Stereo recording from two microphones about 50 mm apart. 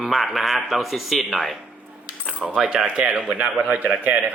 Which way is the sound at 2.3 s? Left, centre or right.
Centre.